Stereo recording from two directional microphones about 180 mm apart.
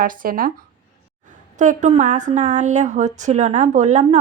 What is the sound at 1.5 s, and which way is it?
Speech, 40° right (ahead or behind).